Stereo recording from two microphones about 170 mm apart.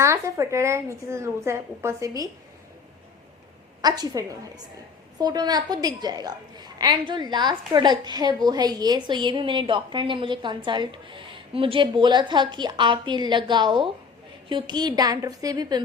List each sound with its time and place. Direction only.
0.0 s a woman's voice: 15° right (ahead or behind)
3.8 s a woman's voice: 25° right (ahead or behind)